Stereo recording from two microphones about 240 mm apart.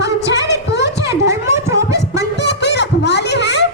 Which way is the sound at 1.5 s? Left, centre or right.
Centre.